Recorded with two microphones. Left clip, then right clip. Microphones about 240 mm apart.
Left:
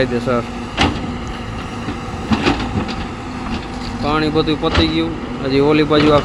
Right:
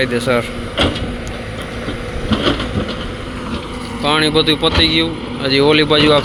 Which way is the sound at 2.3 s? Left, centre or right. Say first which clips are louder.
Even; centre.